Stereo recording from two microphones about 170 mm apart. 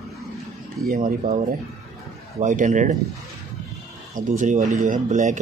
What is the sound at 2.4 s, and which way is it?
Speech, 50° right (ahead or behind).